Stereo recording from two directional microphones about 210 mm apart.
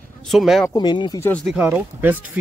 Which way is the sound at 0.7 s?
20° left (ahead or behind).